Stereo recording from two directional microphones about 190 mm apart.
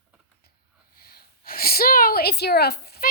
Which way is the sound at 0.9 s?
55° left (ahead or behind).